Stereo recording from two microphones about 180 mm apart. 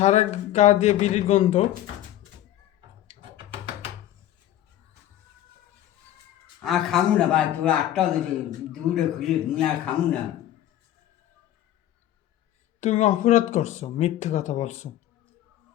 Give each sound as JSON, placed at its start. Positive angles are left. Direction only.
{"t": 0.0, "sound": "speech", "side_deg": 40}
{"t": 6.6, "sound": "a man's voice", "side_deg": 0}
{"t": 12.8, "sound": "speech", "side_deg": 40}